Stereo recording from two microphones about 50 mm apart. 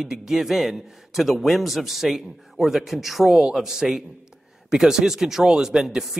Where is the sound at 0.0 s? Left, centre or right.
Centre.